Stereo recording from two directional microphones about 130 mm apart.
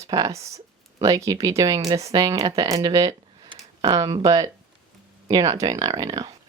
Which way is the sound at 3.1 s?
35° right (ahead or behind).